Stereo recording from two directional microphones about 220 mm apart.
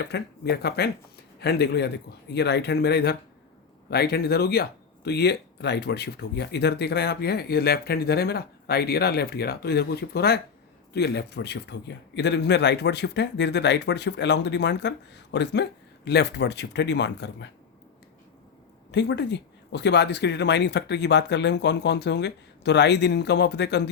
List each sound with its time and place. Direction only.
0.0 s speech: 50° left (ahead or behind)
18.9 s speech: 50° left (ahead or behind)